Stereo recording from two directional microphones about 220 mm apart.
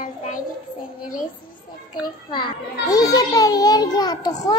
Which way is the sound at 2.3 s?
20° left (ahead or behind).